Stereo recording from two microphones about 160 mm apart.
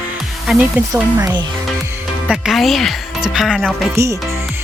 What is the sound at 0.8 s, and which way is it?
Speech, 10° right (ahead or behind).